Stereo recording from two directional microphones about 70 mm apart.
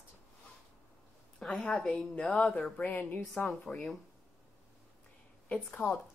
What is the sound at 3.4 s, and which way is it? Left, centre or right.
Speech, centre.